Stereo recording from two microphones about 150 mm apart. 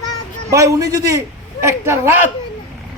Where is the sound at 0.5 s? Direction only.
20° right (ahead or behind).